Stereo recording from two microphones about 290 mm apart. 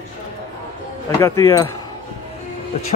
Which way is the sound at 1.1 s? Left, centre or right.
Centre.